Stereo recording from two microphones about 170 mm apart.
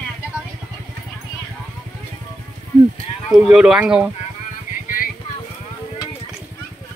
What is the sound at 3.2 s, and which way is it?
Speech, centre (ahead or behind).